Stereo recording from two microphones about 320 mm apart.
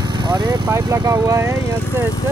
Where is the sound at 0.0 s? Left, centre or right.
Centre.